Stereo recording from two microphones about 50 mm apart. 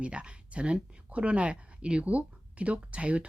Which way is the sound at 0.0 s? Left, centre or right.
Right.